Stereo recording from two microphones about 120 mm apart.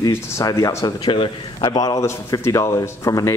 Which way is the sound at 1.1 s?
40° left (ahead or behind).